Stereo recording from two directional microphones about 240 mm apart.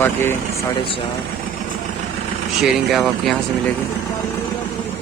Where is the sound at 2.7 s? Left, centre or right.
Centre.